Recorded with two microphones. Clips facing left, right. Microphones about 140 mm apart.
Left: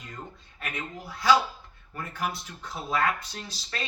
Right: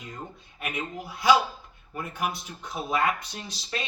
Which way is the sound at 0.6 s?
15° right (ahead or behind).